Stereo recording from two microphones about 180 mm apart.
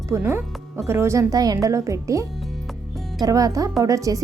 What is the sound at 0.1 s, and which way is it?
Speech, 10° right (ahead or behind).